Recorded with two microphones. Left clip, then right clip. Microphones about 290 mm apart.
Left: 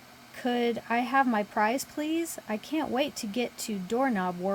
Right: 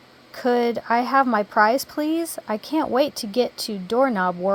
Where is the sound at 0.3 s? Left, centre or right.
Centre.